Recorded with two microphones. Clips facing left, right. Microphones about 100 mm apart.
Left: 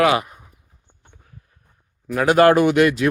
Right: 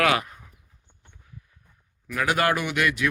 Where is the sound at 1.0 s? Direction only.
50° left (ahead or behind).